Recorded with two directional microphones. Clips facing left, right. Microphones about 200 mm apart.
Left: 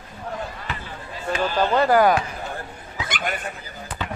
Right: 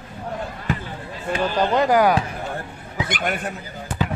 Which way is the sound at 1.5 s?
15° right (ahead or behind).